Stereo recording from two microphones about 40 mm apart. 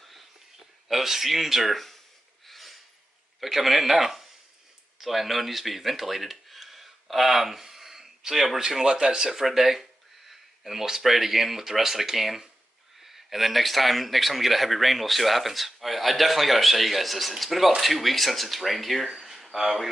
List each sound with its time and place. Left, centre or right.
0.8 s speech: centre
2.4 s a sound: centre
3.3 s speech: centre
9.3 s speech: centre